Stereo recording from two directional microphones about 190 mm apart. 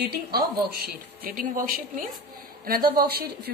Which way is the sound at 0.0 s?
55° right (ahead or behind).